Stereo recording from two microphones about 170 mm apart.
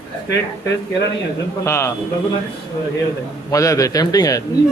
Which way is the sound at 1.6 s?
15° left (ahead or behind).